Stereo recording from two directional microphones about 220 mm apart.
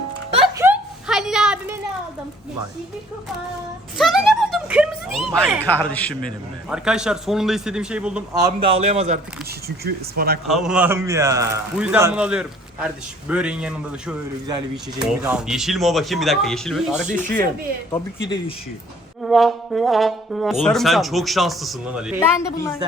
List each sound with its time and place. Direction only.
0.5 s a sound: 10° right (ahead or behind)
3.9 s a sound: centre (ahead or behind)
5.5 s a man's voice: 10° left (ahead or behind)
8.4 s a man's voice: 15° right (ahead or behind)
8.8 s speech: 30° right (ahead or behind)
9.6 s speech: 45° right (ahead or behind)
10.4 s a man's voice: centre (ahead or behind)
14.4 s speech: 20° right (ahead or behind)
15.0 s a man's voice: 5° right (ahead or behind)
17.9 s speech: 20° left (ahead or behind)
19.2 s a man's voice: centre (ahead or behind)
22.2 s speech: 15° left (ahead or behind)